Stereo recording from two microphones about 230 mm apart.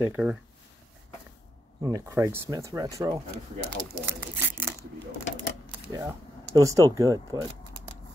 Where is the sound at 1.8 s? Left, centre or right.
Centre.